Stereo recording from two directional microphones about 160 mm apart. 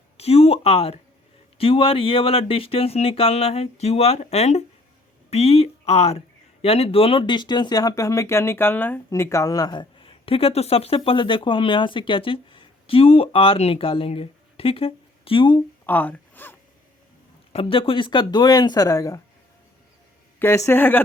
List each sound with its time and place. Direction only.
0.2 s speech: 40° left (ahead or behind)
15.9 s speech: 10° left (ahead or behind)
17.5 s speech: 35° left (ahead or behind)
20.4 s speech: 15° left (ahead or behind)